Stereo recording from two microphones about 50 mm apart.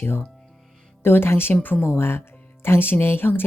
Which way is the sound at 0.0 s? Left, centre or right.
Left.